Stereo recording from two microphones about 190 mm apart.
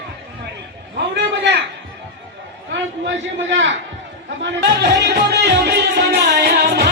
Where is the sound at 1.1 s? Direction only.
65° right (ahead or behind).